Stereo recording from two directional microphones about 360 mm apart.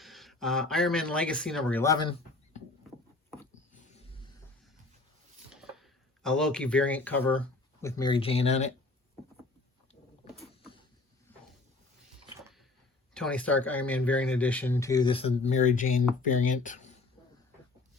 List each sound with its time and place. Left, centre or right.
0.0 s speech: centre
3.2 s rodents: centre
3.9 s a sound: centre
5.5 s speech: centre
10.2 s vehicle: centre
13.1 s speech: centre; by 16.7 s left